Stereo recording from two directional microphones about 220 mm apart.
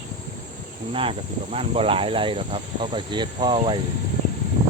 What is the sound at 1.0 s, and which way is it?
Speech, 25° right (ahead or behind).